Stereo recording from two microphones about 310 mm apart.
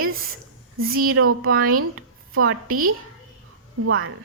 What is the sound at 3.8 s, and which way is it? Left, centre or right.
Speech, right.